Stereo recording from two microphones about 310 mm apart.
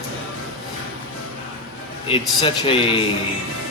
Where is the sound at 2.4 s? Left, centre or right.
Centre.